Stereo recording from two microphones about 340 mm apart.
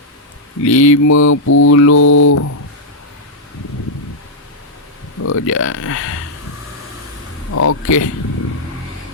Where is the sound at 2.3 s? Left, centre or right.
Left.